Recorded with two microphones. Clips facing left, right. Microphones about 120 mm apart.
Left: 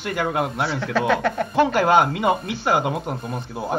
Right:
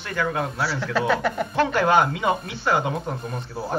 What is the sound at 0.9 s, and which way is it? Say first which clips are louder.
Speech: left 2 dB; 5° right (ahead or behind).